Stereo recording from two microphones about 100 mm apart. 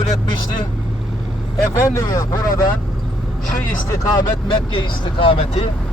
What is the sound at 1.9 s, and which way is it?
Speech, 35° left (ahead or behind).